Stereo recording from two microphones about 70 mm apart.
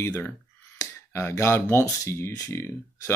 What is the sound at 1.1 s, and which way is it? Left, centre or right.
Speech, left.